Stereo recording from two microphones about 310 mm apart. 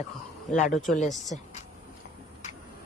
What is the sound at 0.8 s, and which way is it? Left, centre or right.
Speech, left.